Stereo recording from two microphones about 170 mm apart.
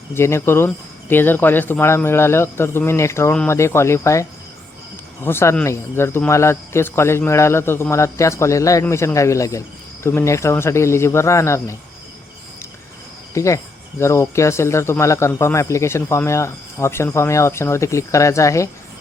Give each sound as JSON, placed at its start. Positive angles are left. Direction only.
{"t": 0.1, "sound": "speech", "side_deg": 15}
{"t": 13.3, "sound": "speech", "side_deg": 20}